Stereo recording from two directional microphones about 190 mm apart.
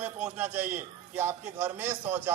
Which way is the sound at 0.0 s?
10° right (ahead or behind).